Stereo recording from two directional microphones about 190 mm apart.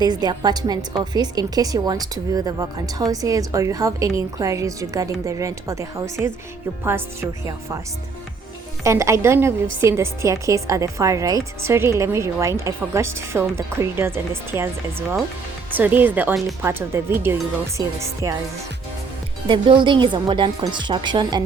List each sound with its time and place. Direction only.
0.0 s a woman's voice: 20° right (ahead or behind)
8.8 s a woman's voice: 15° right (ahead or behind)
15.7 s a woman's voice: 10° right (ahead or behind)
19.5 s a woman's voice: 25° right (ahead or behind)